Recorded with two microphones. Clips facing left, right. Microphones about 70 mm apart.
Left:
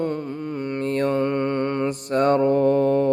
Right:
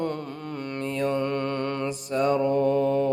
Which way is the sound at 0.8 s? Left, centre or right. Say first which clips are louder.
Left 5 dB; left.